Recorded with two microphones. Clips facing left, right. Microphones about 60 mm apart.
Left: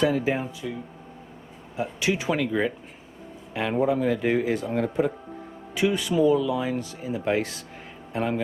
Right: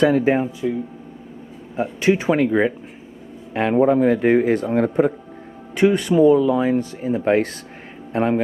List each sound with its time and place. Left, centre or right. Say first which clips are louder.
0.0 s speech: right 7 dB; right
0.6 s speech: right 10 dB; right
1.7 s speech: right 8 dB; right
6.1 s speech: right 7 dB; right